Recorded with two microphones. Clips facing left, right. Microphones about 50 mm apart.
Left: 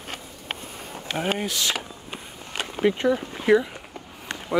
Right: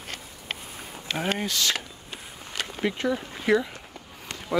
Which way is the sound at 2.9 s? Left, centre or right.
Left.